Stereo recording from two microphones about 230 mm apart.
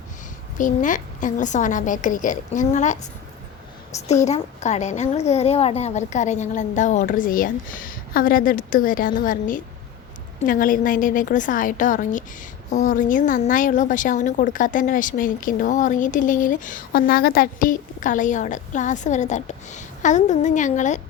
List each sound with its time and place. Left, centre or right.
0.6 s a woman's voice: left
4.1 s a woman's voice: left